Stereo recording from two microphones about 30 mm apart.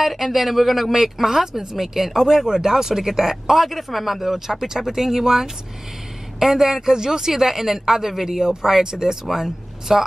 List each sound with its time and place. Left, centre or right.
0.0 s speech: centre